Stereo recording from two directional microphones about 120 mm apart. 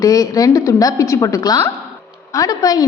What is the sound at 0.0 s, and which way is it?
A woman's voice, 30° left (ahead or behind).